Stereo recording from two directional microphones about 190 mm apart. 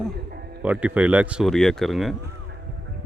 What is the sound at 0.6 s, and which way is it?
Speech, 5° right (ahead or behind).